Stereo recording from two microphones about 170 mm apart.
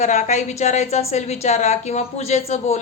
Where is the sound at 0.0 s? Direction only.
45° left (ahead or behind).